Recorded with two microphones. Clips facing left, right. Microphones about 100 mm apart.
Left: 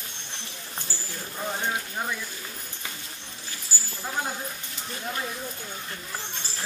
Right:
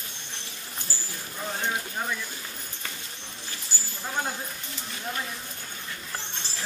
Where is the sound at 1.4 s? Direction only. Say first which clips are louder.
Left 1 dB; 10° left (ahead or behind).